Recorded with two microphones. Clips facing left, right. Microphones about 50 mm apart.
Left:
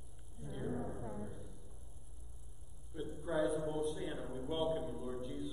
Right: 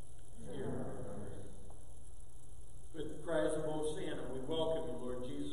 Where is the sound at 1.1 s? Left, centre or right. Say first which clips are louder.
Left 2 dB; centre.